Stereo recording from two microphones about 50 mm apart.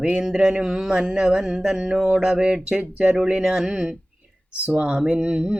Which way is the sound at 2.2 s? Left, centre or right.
Centre.